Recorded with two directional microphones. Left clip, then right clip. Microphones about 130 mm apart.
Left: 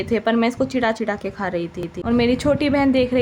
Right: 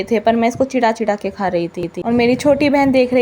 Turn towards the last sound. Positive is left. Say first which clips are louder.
# right 5 dB
turn(degrees=-20)  # may be behind; listen again after turning